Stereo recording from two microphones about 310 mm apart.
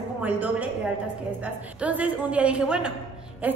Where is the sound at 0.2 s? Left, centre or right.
Centre.